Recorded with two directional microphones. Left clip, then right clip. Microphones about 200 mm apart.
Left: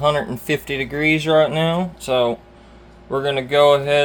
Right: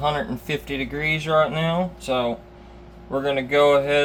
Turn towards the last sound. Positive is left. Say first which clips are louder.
# left 3 dB
turn(degrees=45)  # may be behind; listen again after turning